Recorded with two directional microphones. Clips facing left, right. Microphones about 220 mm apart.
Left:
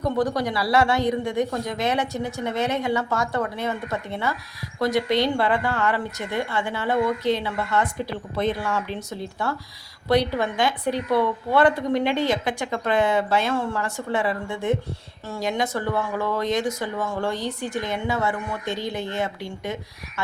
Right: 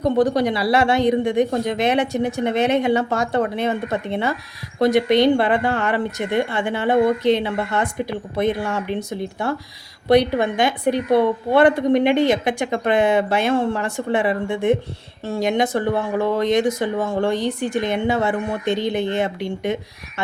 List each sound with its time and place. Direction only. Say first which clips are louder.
0.2 s a woman's voice: right 6 dB; 25° right (ahead or behind)